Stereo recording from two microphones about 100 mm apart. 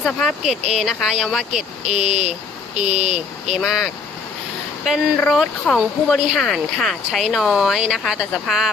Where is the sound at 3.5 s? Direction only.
5° right (ahead or behind).